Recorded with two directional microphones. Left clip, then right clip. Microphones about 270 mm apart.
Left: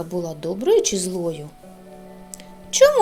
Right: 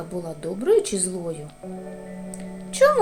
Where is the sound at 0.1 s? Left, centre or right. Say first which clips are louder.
Left 3 dB; left.